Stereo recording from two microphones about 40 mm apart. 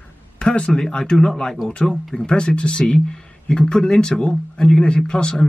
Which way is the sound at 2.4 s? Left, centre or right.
Left.